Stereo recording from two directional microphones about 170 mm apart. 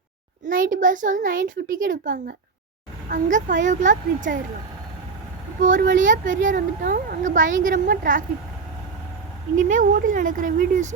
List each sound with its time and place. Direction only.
0.4 s a woman's voice: 50° right (ahead or behind)
5.6 s a woman's voice: 50° right (ahead or behind)
9.6 s a woman's voice: 50° right (ahead or behind)